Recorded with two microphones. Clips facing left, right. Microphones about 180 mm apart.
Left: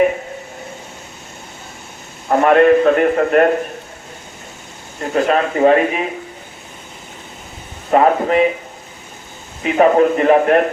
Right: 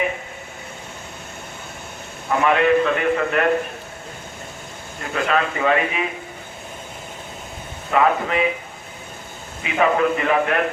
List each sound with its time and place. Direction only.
2.3 s a man's voice: 45° left (ahead or behind)
5.1 s a man's voice: 40° left (ahead or behind)
7.9 s a man's voice: 40° left (ahead or behind)
9.6 s a man's voice: 40° left (ahead or behind)